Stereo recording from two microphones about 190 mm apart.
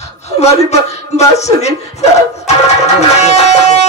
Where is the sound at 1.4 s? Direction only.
35° left (ahead or behind).